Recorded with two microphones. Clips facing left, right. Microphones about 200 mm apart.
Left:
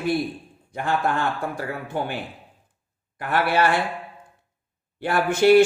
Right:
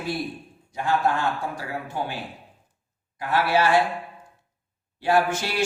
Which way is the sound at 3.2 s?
55° left (ahead or behind).